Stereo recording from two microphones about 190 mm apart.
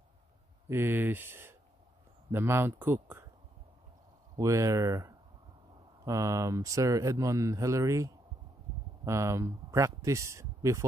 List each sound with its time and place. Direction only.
0.7 s speech: 10° right (ahead or behind)
4.4 s speech: 15° right (ahead or behind)